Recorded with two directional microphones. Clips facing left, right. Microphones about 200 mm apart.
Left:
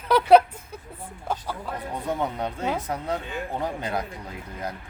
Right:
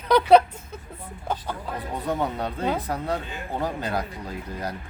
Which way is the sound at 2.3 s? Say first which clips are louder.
Right 1 dB; 15° left (ahead or behind).